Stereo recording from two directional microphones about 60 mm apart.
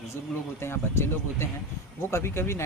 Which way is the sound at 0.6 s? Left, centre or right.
Left.